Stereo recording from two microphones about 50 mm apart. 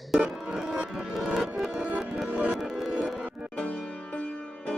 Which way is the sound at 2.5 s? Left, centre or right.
Centre.